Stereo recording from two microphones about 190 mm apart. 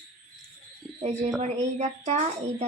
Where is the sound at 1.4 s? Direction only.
35° right (ahead or behind).